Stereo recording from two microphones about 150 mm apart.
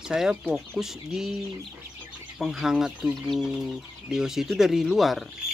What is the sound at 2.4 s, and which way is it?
Speech, 5° right (ahead or behind).